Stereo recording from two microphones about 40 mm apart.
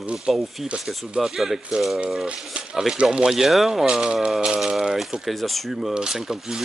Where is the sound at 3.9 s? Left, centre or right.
Right.